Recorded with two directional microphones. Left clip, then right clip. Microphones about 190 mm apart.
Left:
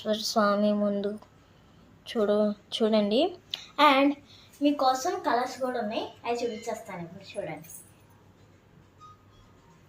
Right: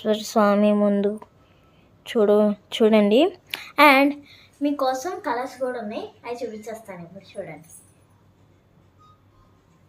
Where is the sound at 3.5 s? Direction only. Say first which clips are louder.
Right 6 dB; 55° right (ahead or behind).